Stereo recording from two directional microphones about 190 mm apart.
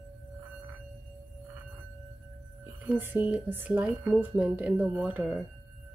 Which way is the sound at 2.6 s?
10° right (ahead or behind).